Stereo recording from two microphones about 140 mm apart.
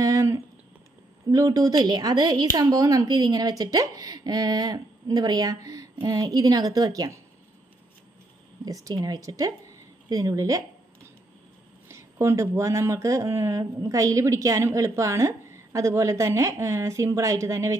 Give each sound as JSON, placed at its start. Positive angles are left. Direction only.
{"t": 0.0, "sound": "a sound", "side_deg": -25}
{"t": 1.3, "sound": "speech", "side_deg": -25}
{"t": 8.6, "sound": "speech", "side_deg": -25}
{"t": 11.9, "sound": "speech", "side_deg": -20}